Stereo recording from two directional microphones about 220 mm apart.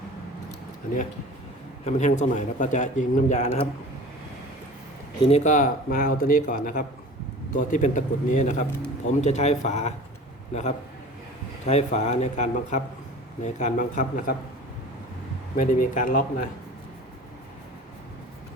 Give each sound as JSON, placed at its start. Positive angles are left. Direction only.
{"t": 1.8, "sound": "a man's voice", "side_deg": 30}
{"t": 5.2, "sound": "a man's voice", "side_deg": 30}
{"t": 15.5, "sound": "a man's voice", "side_deg": 35}